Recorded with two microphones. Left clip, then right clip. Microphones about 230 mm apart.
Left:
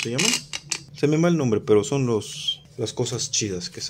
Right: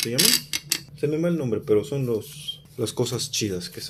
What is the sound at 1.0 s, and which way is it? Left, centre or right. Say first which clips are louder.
Speech: left 5 dB; left.